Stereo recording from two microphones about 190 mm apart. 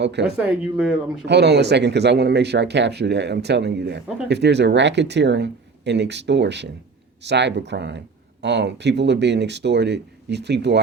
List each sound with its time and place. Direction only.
0.0 s speech: 65° right (ahead or behind)
0.3 s speech: 5° right (ahead or behind)
1.2 s speech: 60° right (ahead or behind)